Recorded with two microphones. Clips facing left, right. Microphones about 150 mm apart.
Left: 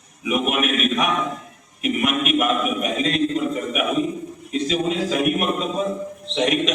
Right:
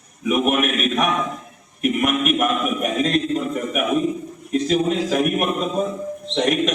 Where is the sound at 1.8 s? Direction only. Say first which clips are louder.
Right 2 dB; 45° right (ahead or behind).